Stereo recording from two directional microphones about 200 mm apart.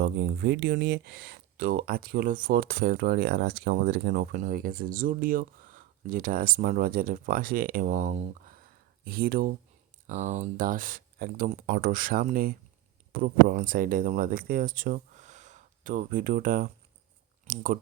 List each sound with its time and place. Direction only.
0.0 s speech: 55° right (ahead or behind)
10.1 s speech: 40° right (ahead or behind)